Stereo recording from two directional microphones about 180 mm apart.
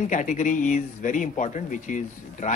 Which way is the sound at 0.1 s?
45° left (ahead or behind).